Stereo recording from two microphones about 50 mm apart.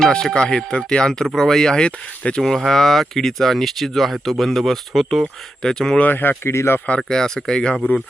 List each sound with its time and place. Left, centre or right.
0.1 s speech: centre
2.4 s speech: centre
6.0 s speech: left
6.5 s speech: left
6.7 s speech: left
7.1 s speech: centre